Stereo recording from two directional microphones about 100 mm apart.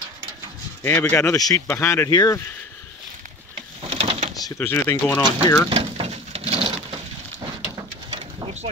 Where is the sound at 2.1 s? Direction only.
40° left (ahead or behind).